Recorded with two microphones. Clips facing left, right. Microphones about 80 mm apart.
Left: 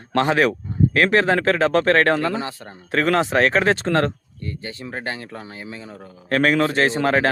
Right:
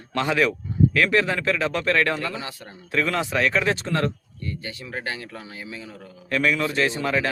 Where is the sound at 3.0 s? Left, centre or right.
Left.